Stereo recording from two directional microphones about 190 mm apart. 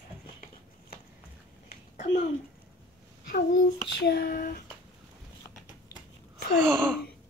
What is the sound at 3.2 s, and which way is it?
Child singing, 60° left (ahead or behind).